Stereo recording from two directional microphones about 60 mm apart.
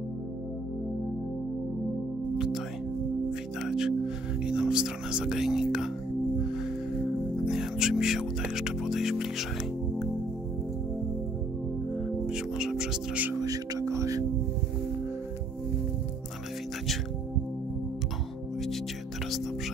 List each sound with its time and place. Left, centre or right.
2.3 s music: centre
3.6 s music: centre
7.4 s music: centre
12.3 s music: centre
13.4 s music: right